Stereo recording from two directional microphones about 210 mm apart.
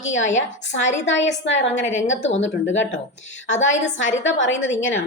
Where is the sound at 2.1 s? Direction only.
35° left (ahead or behind).